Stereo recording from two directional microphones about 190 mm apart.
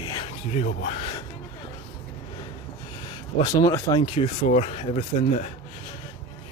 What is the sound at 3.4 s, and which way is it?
Speech, 20° left (ahead or behind).